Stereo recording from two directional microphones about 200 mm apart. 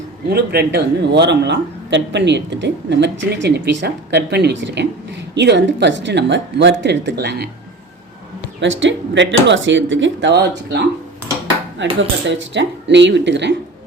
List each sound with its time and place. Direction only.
0.3 s a man's voice: 55° right (ahead or behind)
8.6 s a man's voice: 70° right (ahead or behind)
11.9 s a man's voice: 65° right (ahead or behind)